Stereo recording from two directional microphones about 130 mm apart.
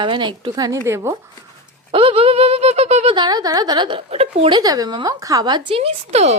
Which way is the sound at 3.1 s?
35° right (ahead or behind).